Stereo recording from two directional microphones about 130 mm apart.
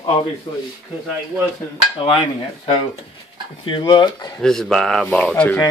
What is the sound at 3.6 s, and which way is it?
Speech, 40° left (ahead or behind).